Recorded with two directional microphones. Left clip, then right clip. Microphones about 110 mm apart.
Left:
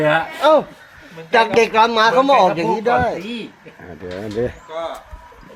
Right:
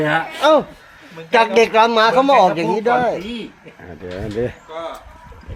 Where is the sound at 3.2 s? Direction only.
5° left (ahead or behind).